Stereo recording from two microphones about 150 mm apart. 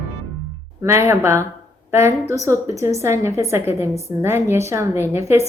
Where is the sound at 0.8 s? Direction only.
15° right (ahead or behind).